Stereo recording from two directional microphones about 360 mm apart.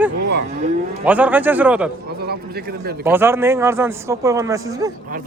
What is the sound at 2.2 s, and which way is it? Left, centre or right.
Speech, right.